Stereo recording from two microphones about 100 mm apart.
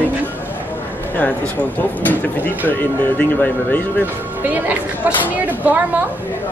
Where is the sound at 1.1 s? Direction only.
15° left (ahead or behind).